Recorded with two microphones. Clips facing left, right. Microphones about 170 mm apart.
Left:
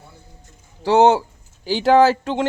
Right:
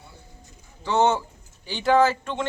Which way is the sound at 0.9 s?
80° left.